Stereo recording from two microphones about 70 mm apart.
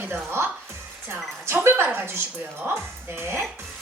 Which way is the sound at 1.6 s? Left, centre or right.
Right.